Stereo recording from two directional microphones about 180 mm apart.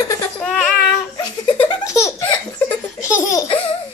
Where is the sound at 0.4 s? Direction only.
5° left (ahead or behind).